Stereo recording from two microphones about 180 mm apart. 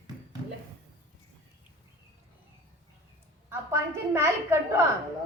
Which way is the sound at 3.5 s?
15° right (ahead or behind).